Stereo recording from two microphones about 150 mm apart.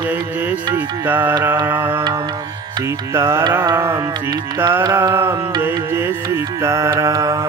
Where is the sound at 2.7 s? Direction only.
15° right (ahead or behind).